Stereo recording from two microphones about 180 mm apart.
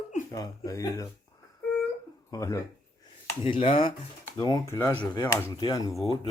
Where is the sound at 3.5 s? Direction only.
30° left (ahead or behind).